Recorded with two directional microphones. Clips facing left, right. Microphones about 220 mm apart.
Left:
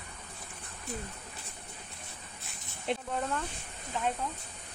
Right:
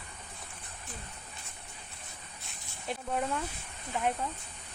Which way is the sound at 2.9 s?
25° left (ahead or behind).